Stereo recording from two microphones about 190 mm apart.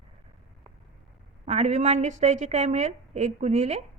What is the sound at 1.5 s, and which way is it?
A woman's voice, 35° right (ahead or behind).